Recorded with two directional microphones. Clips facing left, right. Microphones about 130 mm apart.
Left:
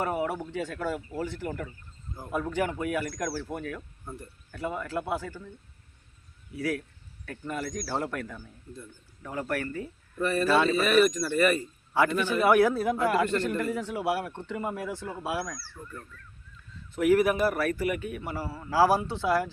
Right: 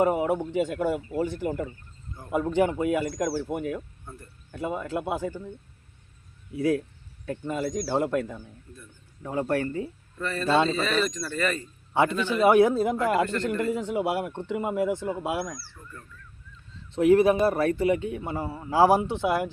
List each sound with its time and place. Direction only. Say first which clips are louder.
0.0 s a man's voice: right 6 dB; 20° right (ahead or behind)
4.0 s speech: left 3 dB; 15° left (ahead or behind)
4.5 s a man's voice: right 2 dB; 20° right (ahead or behind)
6.5 s a man's voice: right 6 dB; 20° right (ahead or behind)
10.2 s speech: left 4 dB; 15° left (ahead or behind)
10.4 s a man's voice: right 2 dB; 25° right (ahead or behind)
10.8 s speech: left 5 dB; 10° left (ahead or behind)
11.9 s a man's voice: right 2 dB; 20° right (ahead or behind)
15.8 s goose: left 3 dB; 20° left (ahead or behind)
16.9 s a man's voice: right 4 dB; 25° right (ahead or behind)